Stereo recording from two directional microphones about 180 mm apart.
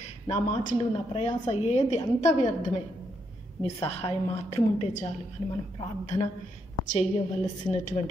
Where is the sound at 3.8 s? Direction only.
30° left (ahead or behind).